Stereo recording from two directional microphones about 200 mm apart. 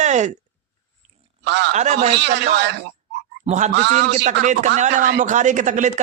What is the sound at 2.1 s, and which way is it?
Speech, 60° right (ahead or behind).